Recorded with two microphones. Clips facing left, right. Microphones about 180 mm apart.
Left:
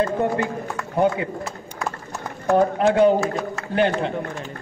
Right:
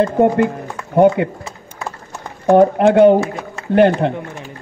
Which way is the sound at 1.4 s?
Centre (ahead or behind).